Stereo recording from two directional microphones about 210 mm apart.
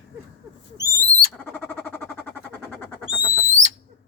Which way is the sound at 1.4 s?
10° left (ahead or behind).